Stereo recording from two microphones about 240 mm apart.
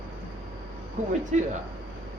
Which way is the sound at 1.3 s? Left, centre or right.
Right.